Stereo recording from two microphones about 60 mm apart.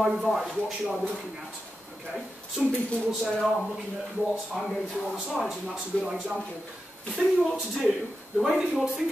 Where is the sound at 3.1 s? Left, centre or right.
Centre.